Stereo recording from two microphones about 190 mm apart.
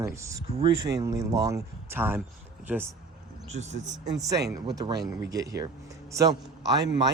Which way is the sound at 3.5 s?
35° right (ahead or behind).